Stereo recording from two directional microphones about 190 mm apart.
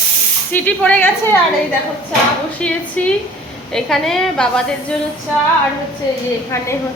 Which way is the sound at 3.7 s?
Centre (ahead or behind).